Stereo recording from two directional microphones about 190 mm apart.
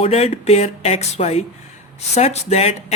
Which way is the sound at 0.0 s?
35° left (ahead or behind).